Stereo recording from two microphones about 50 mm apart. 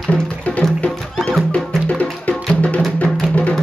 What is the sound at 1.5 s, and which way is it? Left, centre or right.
Music, left.